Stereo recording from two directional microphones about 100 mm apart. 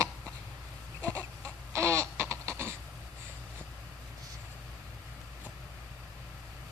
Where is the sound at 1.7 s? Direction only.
30° right (ahead or behind).